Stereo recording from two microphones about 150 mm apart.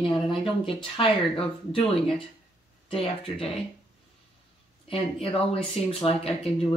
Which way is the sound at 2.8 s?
35° left (ahead or behind).